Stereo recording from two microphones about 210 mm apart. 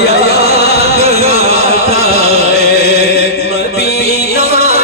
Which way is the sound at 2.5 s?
50° left (ahead or behind).